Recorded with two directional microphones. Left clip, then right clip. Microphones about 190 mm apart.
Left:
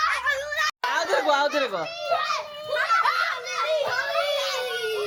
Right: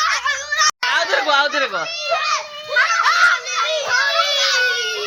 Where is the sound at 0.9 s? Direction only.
10° right (ahead or behind).